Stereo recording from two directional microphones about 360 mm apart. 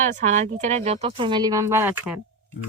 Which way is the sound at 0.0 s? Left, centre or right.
Centre.